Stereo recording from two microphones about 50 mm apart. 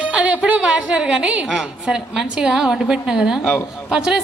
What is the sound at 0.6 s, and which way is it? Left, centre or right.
A woman's voice, centre.